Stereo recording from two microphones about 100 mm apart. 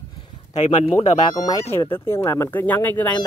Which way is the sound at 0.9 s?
35° left (ahead or behind).